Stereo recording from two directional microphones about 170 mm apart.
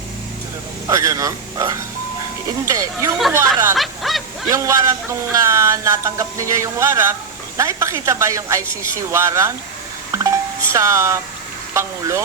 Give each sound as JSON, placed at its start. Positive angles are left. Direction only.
{"t": 0.9, "sound": "a man's voice", "side_deg": -20}
{"t": 3.8, "sound": "a sound", "side_deg": 0}
{"t": 4.4, "sound": "speech", "side_deg": -20}
{"t": 10.1, "sound": "music", "side_deg": -15}
{"t": 11.7, "sound": "speech", "side_deg": -15}